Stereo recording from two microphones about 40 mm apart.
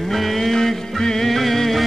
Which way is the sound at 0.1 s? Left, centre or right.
Centre.